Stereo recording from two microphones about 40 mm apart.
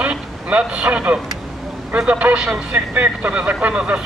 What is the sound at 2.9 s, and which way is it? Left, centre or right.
Speech, right.